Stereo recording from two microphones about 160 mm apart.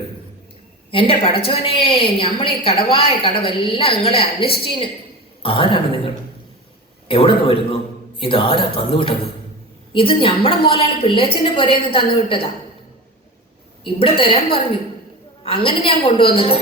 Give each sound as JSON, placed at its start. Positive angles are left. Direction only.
{"t": 0.9, "sound": "a woman's voice", "side_deg": 35}
{"t": 7.1, "sound": "a woman's voice", "side_deg": 35}
{"t": 13.8, "sound": "a woman's voice", "side_deg": 35}